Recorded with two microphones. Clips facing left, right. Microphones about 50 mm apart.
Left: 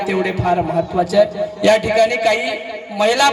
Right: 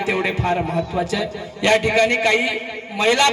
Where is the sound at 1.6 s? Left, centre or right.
Right.